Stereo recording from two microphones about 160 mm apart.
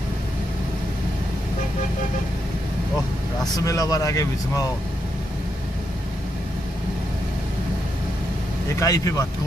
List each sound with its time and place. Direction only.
3.5 s speech: 25° left (ahead or behind)
8.7 s speech: 20° left (ahead or behind)